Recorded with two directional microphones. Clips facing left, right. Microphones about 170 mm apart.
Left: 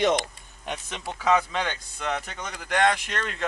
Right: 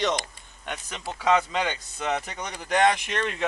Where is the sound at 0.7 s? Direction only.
Centre (ahead or behind).